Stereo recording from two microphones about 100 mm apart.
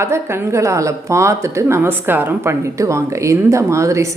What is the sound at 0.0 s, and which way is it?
A woman's voice, 25° right (ahead or behind).